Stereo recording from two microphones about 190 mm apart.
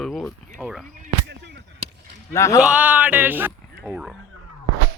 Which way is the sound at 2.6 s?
5° right (ahead or behind).